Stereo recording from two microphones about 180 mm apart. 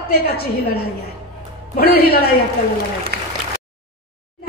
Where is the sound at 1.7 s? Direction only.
60° left (ahead or behind).